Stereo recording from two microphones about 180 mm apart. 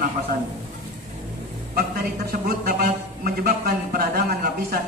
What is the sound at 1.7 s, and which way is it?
A man's voice, 60° right (ahead or behind).